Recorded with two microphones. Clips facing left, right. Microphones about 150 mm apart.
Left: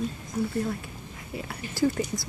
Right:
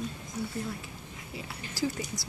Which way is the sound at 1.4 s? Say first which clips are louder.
Left 6 dB; 50° left (ahead or behind).